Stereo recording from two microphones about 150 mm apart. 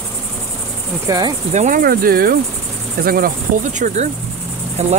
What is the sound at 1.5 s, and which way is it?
Speech, 50° right (ahead or behind).